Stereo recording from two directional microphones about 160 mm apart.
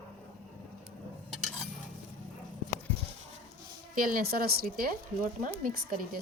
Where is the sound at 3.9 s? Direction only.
60° right (ahead or behind).